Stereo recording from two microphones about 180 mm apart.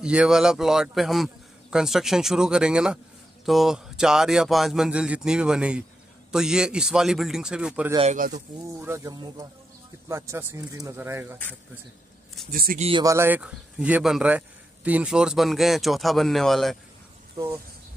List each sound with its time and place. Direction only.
0.0 s a man's voice: 5° right (ahead or behind)
8.0 s speech: 45° right (ahead or behind)
8.7 s speech: 15° right (ahead or behind)
12.4 s speech: 55° right (ahead or behind)
12.7 s speech: 35° right (ahead or behind)
13.0 s a man's voice: 15° right (ahead or behind); by 16.7 s centre (ahead or behind)